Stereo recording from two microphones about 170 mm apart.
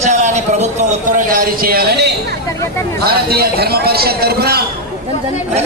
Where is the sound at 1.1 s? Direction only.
55° right (ahead or behind).